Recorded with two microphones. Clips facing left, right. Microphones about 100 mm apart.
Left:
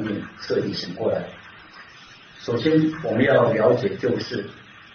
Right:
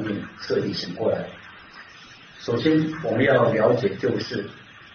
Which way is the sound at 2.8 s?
Centre (ahead or behind).